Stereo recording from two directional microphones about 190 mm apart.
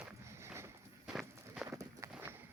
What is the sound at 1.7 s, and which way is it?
Walk, 15° right (ahead or behind).